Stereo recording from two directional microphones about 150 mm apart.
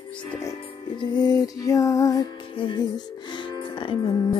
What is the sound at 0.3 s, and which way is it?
Music, 20° left (ahead or behind).